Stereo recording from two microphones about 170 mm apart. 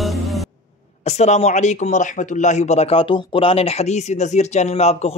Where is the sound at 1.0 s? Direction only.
40° left (ahead or behind).